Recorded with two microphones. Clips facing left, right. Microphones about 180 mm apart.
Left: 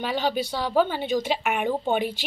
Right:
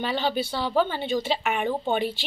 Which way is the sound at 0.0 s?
10° left (ahead or behind).